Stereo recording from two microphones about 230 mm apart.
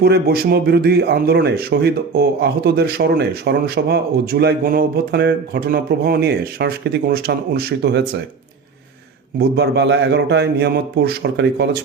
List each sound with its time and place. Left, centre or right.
0.0 s speech: right
9.4 s speech: right